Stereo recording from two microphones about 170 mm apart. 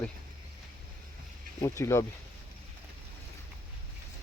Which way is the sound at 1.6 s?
15° left (ahead or behind).